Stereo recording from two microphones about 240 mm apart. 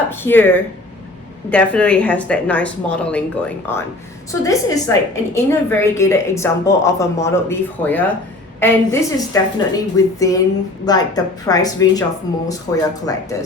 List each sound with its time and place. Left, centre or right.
0.1 s a woman's voice: centre